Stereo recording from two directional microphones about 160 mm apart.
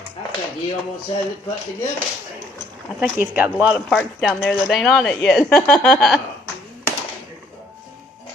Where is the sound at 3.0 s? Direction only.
10° right (ahead or behind).